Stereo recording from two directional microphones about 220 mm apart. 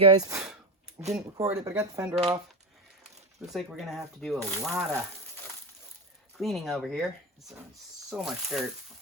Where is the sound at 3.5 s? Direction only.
Centre (ahead or behind).